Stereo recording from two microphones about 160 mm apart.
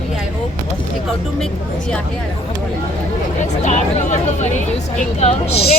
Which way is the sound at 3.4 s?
45° left (ahead or behind).